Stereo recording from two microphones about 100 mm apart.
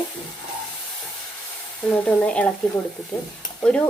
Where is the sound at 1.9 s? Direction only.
15° left (ahead or behind).